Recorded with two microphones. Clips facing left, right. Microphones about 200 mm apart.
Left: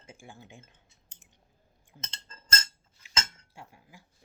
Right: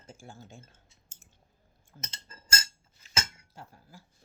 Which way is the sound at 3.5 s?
15° left (ahead or behind).